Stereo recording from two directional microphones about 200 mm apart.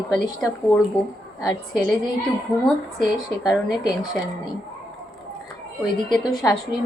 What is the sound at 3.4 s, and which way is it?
Speech, centre (ahead or behind).